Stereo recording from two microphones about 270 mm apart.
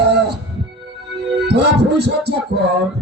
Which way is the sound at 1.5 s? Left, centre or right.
Right.